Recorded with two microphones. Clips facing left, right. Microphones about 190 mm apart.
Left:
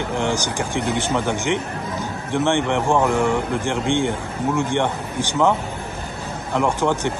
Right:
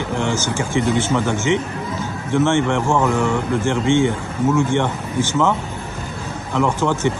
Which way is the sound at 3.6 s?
60° left (ahead or behind).